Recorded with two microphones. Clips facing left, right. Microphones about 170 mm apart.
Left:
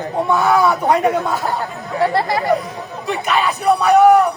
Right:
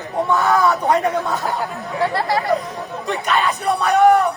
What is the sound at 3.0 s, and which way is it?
Speech, 5° left (ahead or behind).